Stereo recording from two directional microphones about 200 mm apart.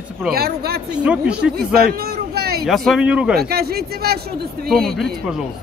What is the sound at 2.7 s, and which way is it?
Speech, centre (ahead or behind).